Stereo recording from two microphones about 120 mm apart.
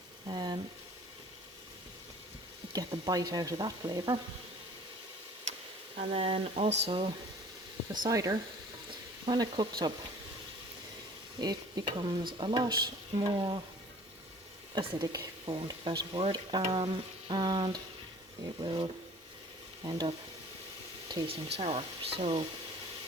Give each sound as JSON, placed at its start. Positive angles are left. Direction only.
{"t": 0.3, "sound": "a sound", "side_deg": -40}
{"t": 2.7, "sound": "speech", "side_deg": -30}
{"t": 6.1, "sound": "speech", "side_deg": -55}
{"t": 8.0, "sound": "speech", "side_deg": -30}
{"t": 11.3, "sound": "speech", "side_deg": -40}
{"t": 14.8, "sound": "speech", "side_deg": -45}
{"t": 21.2, "sound": "speech", "side_deg": -55}